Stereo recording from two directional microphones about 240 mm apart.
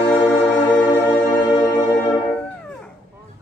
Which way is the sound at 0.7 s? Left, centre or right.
Centre.